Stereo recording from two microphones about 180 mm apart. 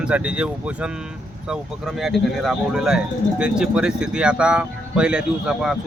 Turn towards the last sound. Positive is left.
turn(degrees=-5)  # may be behind; listen again after turning